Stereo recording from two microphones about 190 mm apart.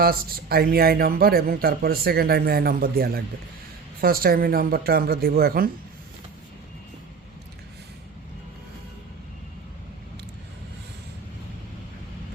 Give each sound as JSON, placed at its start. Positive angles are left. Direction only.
{"t": 0.0, "sound": "speech", "side_deg": -50}